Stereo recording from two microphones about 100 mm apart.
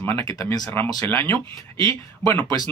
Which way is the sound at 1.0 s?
20° left (ahead or behind).